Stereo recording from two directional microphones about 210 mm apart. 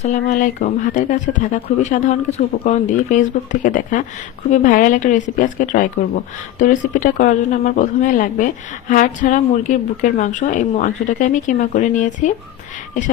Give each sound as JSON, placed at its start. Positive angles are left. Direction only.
{"t": 0.0, "sound": "speech", "side_deg": 35}